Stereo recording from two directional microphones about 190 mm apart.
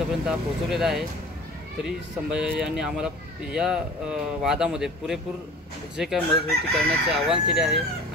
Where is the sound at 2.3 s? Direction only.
5° right (ahead or behind).